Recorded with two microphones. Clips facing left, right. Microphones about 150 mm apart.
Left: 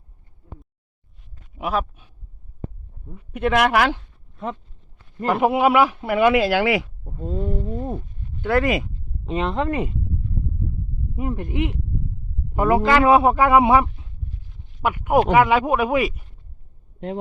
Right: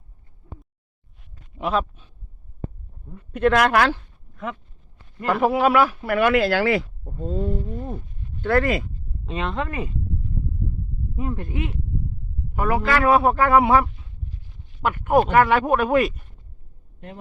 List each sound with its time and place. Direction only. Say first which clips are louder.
1.5 s a sound: right 1 dB; 10° left (ahead or behind)
3.2 s speech: right 1 dB; 10° left (ahead or behind)
4.4 s speech: left 2 dB; 30° left (ahead or behind); by 6.8 s 15° left (ahead or behind)
7.0 s speech: right 1 dB; centre (ahead or behind)
7.7 s a man's voice: left 4 dB; 20° left (ahead or behind)
11.2 s a man's voice: left 3 dB; 15° left (ahead or behind)